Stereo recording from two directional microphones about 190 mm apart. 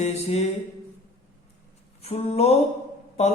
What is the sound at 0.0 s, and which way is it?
Speech, 35° left (ahead or behind).